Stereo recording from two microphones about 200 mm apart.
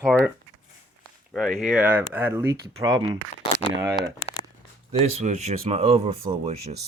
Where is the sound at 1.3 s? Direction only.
Centre (ahead or behind).